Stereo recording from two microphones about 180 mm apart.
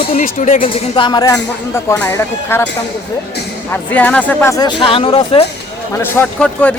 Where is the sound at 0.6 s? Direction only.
30° left (ahead or behind).